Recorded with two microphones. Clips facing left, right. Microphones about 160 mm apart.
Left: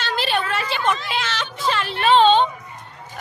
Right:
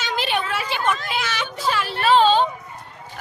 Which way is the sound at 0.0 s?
15° right (ahead or behind).